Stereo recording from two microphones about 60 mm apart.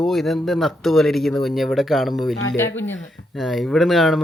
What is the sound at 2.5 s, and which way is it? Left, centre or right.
Speech, left.